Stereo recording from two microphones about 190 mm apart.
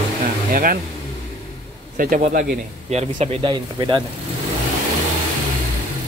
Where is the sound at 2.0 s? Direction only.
45° right (ahead or behind); by 4.0 s 25° right (ahead or behind).